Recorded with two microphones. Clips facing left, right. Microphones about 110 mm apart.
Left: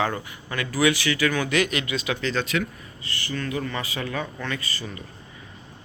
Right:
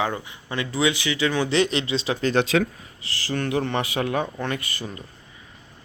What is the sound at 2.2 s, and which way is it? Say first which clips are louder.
Speech: right 8 dB; 50° right (ahead or behind).